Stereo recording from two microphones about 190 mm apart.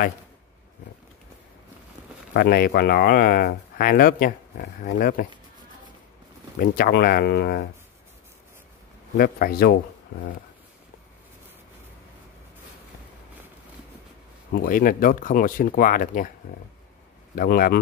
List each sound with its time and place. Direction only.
2.3 s speech: 50° left (ahead or behind)
6.6 s speech: 55° left (ahead or behind)
9.1 s speech: 50° left (ahead or behind)
14.6 s speech: 50° left (ahead or behind)
17.4 s speech: 50° left (ahead or behind)